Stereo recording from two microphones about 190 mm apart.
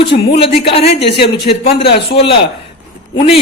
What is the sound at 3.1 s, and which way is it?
Speech, 30° left (ahead or behind).